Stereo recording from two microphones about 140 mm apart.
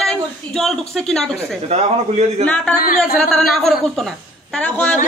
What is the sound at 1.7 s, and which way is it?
Speech, 50° right (ahead or behind).